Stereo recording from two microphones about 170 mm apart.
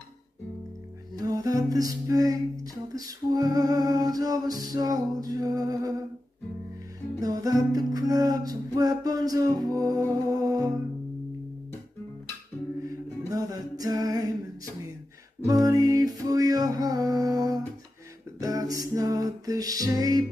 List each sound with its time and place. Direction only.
1.1 s music: 20° right (ahead or behind)
7.2 s music: 20° right (ahead or behind)
13.3 s a sound: 20° right (ahead or behind)
15.4 s music: 20° right (ahead or behind)